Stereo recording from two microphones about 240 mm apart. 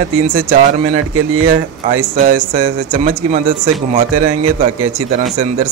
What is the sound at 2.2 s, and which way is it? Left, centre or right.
A man's voice, right.